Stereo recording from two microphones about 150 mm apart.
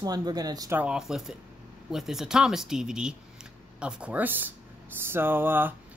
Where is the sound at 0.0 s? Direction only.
25° right (ahead or behind).